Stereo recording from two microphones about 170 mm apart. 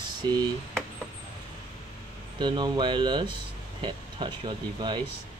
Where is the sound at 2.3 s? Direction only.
25° right (ahead or behind).